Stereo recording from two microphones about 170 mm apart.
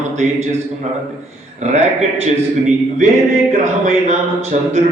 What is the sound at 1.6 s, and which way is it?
Speech, 40° right (ahead or behind).